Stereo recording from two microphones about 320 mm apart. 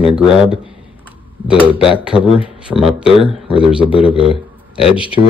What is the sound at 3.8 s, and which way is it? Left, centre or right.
Speech, centre.